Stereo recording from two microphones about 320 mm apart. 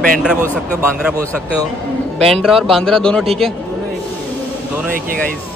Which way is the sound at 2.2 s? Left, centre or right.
Centre.